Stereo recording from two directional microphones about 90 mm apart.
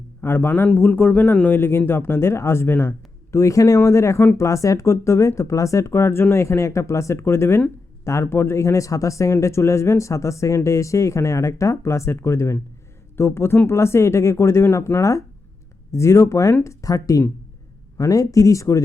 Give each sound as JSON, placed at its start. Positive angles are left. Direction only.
{"t": 0.2, "sound": "a man's voice", "side_deg": 25}
{"t": 3.3, "sound": "a man's voice", "side_deg": 35}